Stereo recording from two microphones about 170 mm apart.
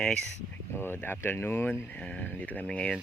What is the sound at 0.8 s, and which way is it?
Speech, 10° left (ahead or behind).